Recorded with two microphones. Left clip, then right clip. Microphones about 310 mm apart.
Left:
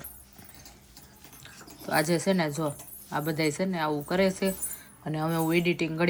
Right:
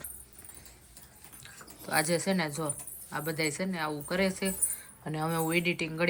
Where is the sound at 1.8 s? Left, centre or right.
Centre.